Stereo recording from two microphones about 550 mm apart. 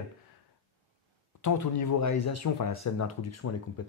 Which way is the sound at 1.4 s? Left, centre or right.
Left.